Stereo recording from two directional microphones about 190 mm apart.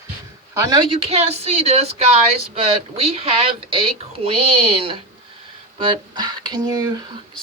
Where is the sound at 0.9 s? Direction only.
30° right (ahead or behind).